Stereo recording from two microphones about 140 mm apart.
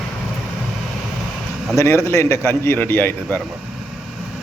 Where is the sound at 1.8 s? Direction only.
20° left (ahead or behind).